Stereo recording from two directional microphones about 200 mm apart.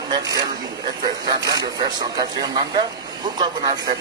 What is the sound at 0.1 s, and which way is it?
Speech, 20° right (ahead or behind).